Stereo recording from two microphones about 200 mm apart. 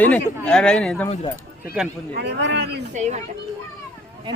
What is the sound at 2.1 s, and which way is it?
Speech, 60° right (ahead or behind).